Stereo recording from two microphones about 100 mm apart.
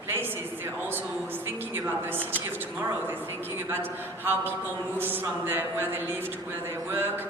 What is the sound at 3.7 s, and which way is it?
A man's voice, 20° right (ahead or behind).